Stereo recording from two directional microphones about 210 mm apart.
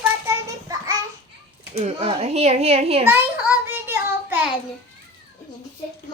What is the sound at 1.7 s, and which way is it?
A child's voice, 30° right (ahead or behind).